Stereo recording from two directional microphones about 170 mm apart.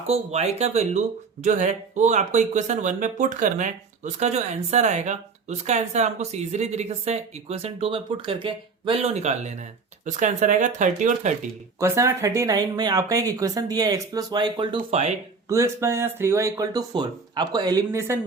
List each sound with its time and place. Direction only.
0.1 s speech: 40° right (ahead or behind)
11.8 s speech: 15° right (ahead or behind)
15.4 s speech: 15° right (ahead or behind)